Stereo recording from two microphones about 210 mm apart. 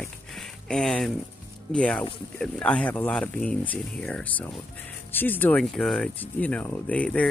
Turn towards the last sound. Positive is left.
turn(degrees=5)  # may be behind; listen again after turning